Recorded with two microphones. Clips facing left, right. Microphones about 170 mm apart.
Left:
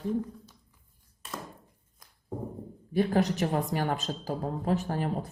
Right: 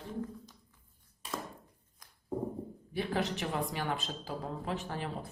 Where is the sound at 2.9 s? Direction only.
45° left (ahead or behind).